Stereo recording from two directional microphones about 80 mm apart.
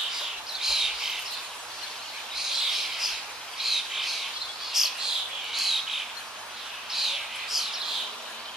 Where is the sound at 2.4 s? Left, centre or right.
Centre.